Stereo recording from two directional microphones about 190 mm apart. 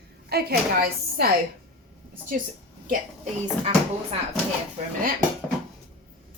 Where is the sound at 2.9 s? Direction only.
35° right (ahead or behind).